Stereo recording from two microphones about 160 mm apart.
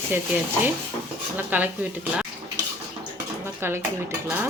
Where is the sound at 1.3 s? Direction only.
10° right (ahead or behind).